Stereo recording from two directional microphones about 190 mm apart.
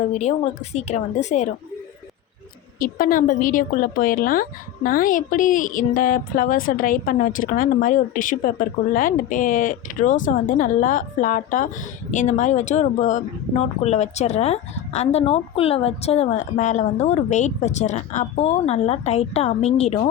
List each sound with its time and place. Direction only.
0.1 s speech: 35° left (ahead or behind)
2.7 s a woman's voice: 50° left (ahead or behind)